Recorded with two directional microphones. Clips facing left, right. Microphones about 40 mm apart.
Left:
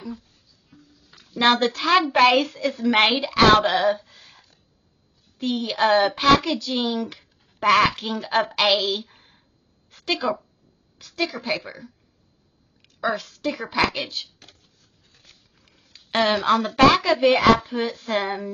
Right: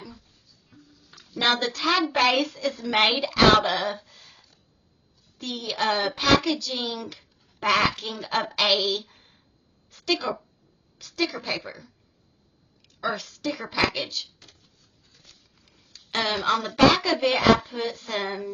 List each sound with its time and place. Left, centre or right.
0.2 s a sound: centre
1.3 s a child's voice: centre
1.6 s a woman's voice: left
2.7 s a woman's voice: centre
3.8 s a sound: centre
5.4 s a woman's voice: centre
7.2 s speech: centre
8.7 s a sound: centre
11.0 s a woman's voice: centre
13.4 s a woman's voice: left
14.8 s a sound: left
16.2 s a woman's voice: centre
17.6 s a woman's voice: centre
18.1 s a woman's voice: centre